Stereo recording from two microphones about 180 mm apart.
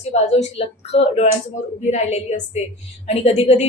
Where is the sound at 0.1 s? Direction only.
35° left (ahead or behind).